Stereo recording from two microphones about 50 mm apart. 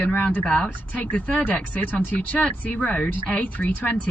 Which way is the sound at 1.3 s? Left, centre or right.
Left.